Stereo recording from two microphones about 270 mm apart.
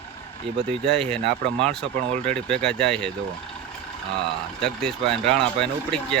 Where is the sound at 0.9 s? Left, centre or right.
Centre.